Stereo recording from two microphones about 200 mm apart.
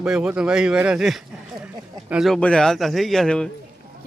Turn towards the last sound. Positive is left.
turn(degrees=5)  # may be behind; listen again after turning